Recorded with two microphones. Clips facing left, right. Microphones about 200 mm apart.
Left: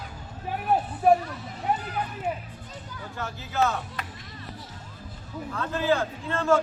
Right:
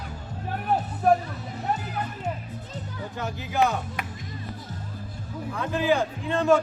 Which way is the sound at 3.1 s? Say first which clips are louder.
Right 2 dB; 15° right (ahead or behind).